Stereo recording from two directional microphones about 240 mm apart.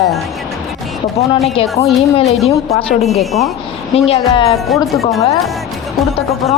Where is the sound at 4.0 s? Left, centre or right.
Left.